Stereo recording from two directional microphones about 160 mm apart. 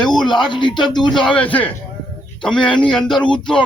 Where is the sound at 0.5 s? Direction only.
30° left (ahead or behind).